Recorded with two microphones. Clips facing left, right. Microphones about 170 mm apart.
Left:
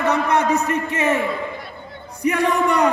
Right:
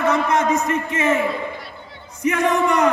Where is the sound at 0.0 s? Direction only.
35° left (ahead or behind).